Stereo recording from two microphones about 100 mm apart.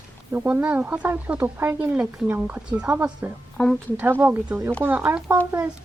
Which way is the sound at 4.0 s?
20° right (ahead or behind).